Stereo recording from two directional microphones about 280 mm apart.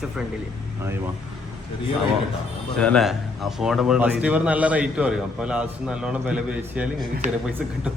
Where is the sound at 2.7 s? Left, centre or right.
Centre.